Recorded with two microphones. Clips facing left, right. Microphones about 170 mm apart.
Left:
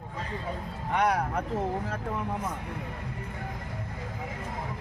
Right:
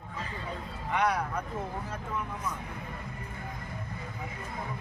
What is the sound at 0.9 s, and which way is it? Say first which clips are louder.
Speech: left 2 dB; 50° left (ahead or behind).